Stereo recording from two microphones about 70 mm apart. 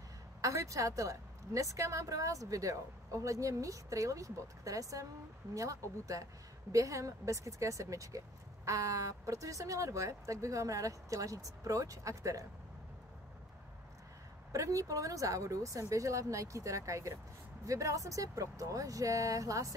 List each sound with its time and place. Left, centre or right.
0.4 s a woman's voice: right
14.5 s a woman's voice: right